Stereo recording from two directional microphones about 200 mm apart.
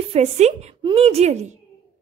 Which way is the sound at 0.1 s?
35° right (ahead or behind).